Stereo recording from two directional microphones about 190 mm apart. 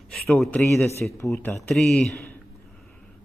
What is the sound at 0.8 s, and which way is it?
Speech, 15° left (ahead or behind).